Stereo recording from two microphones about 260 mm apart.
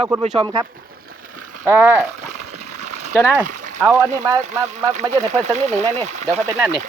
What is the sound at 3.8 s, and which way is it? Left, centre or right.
Speech, centre.